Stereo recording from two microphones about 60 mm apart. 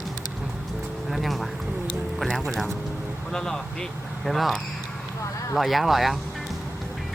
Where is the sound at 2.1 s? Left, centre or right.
Centre.